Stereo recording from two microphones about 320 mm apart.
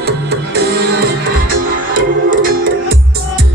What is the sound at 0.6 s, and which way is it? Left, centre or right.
Music, right.